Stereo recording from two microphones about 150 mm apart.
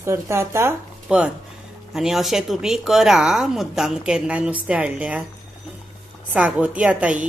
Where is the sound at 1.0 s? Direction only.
5° right (ahead or behind).